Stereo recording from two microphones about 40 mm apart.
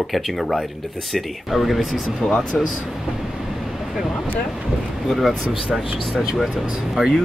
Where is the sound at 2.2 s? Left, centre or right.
Left.